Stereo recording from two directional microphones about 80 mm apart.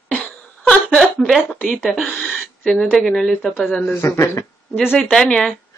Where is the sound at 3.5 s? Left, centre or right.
Left.